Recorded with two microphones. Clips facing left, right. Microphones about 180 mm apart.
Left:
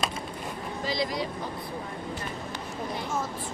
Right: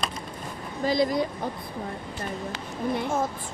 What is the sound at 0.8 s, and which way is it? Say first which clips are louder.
Speech: right 7 dB; 50° right (ahead or behind).